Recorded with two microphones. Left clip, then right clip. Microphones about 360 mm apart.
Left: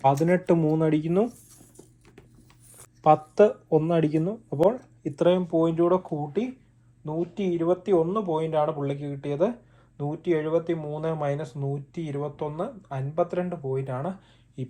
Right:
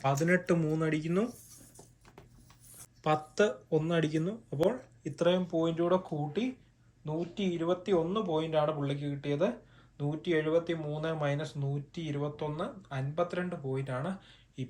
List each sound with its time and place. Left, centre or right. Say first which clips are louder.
0.0 s speech: left 7 dB; centre
3.0 s speech: left 10 dB; centre